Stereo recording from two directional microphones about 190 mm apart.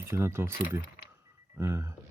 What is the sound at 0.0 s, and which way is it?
Speech, 15° right (ahead or behind).